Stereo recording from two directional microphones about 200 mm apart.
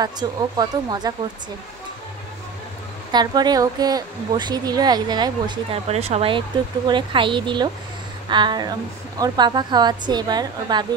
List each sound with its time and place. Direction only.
0.0 s speech: 20° right (ahead or behind)
3.1 s speech: 20° right (ahead or behind)